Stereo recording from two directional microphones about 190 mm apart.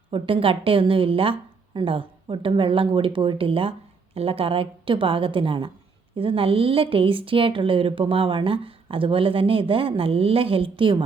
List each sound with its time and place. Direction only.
0.1 s a woman's voice: 30° right (ahead or behind)